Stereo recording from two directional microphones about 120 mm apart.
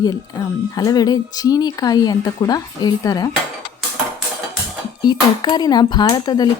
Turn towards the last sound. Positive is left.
turn(degrees=35)  # may be behind; listen again after turning